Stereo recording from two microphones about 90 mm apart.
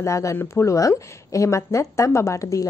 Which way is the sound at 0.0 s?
35° left (ahead or behind).